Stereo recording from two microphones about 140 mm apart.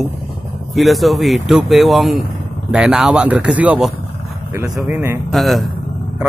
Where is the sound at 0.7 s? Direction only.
Centre (ahead or behind).